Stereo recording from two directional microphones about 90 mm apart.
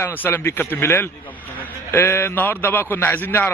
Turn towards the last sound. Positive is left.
turn(degrees=25)  # may be behind; listen again after turning